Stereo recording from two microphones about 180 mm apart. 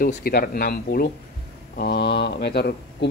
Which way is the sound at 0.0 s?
55° left (ahead or behind).